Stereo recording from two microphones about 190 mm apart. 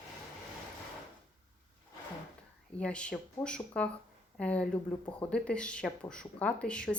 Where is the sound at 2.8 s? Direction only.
5° left (ahead or behind).